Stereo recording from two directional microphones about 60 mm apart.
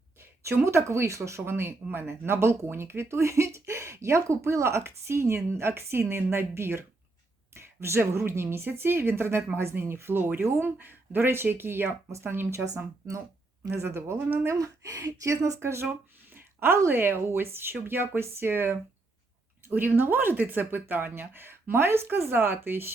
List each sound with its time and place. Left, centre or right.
0.6 s speech: right
12.7 s speech: right
13.7 s speech: right
14.4 s speech: right